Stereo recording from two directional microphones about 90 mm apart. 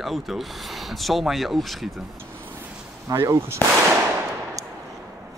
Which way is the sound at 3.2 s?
30° right (ahead or behind).